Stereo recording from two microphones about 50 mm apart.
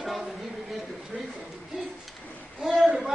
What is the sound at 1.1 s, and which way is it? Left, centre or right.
Speech, right.